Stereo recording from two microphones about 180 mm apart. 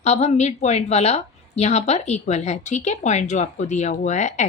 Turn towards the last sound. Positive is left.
turn(degrees=40)  # may be behind; listen again after turning